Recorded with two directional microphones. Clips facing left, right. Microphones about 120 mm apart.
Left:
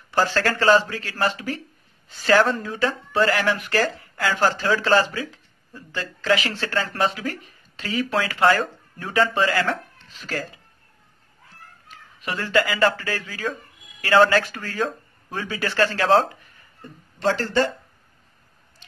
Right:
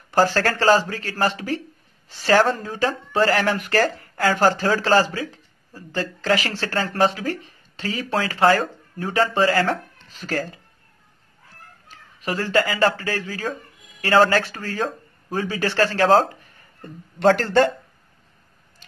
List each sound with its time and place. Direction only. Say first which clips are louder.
0.1 s speech: right 3 dB; 45° right (ahead or behind)
11.9 s speech: right 3 dB; 40° right (ahead or behind)
17.2 s speech: right 5 dB; 55° right (ahead or behind)